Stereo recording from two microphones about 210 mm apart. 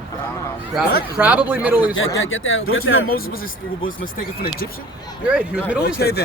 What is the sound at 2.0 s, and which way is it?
Speech, 70° left (ahead or behind).